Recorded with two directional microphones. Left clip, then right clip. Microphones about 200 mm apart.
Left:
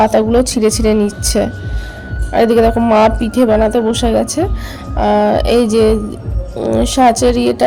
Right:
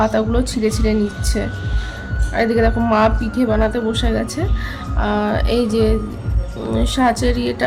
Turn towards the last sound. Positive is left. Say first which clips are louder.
# left 8 dB
turn(degrees=30)  # may be behind; listen again after turning